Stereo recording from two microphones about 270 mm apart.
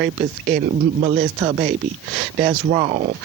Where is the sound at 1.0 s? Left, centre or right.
Right.